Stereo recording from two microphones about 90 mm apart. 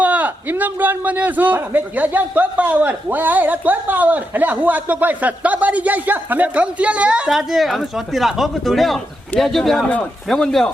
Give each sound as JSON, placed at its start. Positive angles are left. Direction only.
{"t": 0.0, "sound": "a man's voice", "side_deg": -15}
{"t": 7.3, "sound": "speech", "side_deg": 0}